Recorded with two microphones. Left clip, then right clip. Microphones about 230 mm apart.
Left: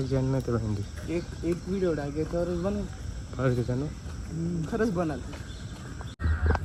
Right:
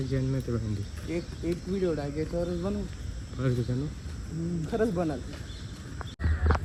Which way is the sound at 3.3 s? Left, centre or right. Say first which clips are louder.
Left 4 dB; centre.